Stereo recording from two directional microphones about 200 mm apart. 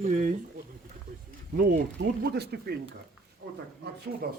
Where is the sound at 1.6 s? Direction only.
50° right (ahead or behind).